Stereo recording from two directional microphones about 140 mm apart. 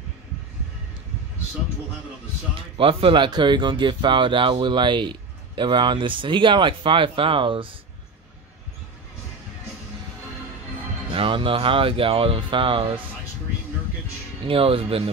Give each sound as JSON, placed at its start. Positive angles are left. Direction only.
{"t": 2.5, "sound": "speech", "side_deg": -40}
{"t": 11.1, "sound": "speech", "side_deg": -40}
{"t": 14.4, "sound": "speech", "side_deg": -40}